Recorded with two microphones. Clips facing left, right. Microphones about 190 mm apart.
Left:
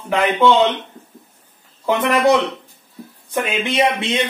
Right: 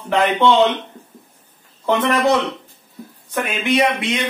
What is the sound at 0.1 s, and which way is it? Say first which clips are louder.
Speech: even; 5° left (ahead or behind).